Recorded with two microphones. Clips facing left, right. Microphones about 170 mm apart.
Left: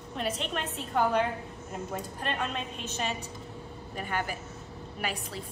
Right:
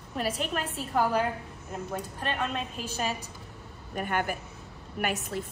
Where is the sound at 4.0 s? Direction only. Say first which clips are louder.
Right 4 dB; 55° right (ahead or behind).